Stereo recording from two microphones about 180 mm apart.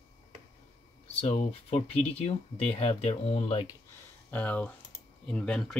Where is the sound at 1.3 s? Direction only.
35° left (ahead or behind).